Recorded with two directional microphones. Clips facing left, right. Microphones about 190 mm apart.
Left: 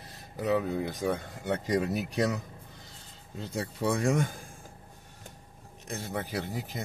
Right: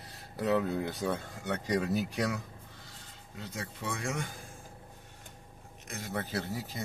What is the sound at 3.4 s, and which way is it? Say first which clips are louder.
Speech: left 9 dB; 30° left (ahead or behind).